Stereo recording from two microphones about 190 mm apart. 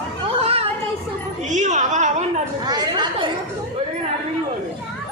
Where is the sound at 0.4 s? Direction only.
30° right (ahead or behind).